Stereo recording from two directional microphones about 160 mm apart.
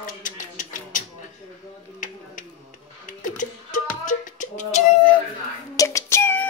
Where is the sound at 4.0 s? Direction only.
50° left (ahead or behind).